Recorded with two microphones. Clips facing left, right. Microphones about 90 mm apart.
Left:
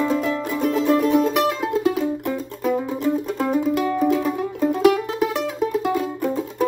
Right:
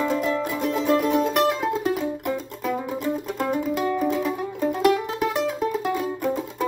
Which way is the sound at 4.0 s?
Centre (ahead or behind).